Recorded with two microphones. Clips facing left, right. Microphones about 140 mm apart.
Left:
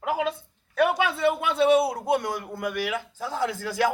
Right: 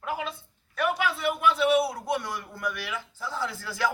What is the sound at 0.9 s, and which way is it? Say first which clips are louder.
A man's voice: left 4 dB; 65° left (ahead or behind).